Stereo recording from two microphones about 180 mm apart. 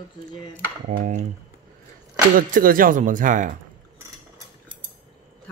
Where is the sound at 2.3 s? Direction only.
50° right (ahead or behind).